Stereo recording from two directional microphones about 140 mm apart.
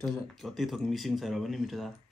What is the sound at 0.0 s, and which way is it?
Speech, centre (ahead or behind).